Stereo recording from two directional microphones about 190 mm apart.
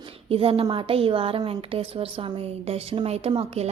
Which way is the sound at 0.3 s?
30° right (ahead or behind).